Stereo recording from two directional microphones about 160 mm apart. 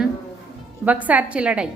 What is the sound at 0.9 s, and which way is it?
Speech, 10° right (ahead or behind).